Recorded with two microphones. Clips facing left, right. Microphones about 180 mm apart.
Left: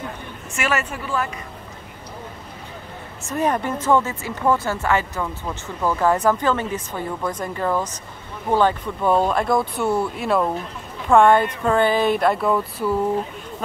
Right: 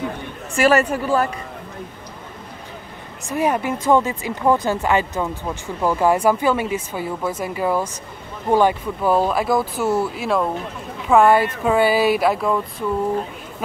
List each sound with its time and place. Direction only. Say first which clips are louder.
0.6 s speech: right 8 dB; 35° right (ahead or behind)
3.3 s speech: right 2 dB; 10° right (ahead or behind)